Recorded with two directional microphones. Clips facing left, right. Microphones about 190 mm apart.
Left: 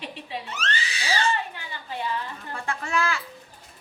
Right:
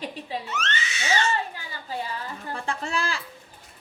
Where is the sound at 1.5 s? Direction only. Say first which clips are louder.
Right 1 dB; 40° right (ahead or behind).